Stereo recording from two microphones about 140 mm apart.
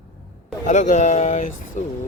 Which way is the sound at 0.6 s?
60° left (ahead or behind).